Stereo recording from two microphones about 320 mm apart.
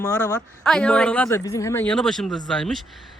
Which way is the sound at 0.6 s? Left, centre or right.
Centre.